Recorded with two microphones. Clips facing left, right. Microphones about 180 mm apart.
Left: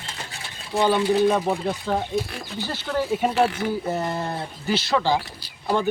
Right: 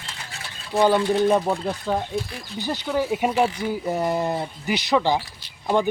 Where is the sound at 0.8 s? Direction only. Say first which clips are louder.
Right 1 dB; 10° right (ahead or behind).